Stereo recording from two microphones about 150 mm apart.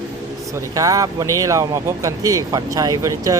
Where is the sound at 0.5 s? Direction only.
20° right (ahead or behind).